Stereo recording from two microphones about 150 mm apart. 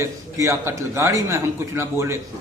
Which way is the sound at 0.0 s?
20° right (ahead or behind).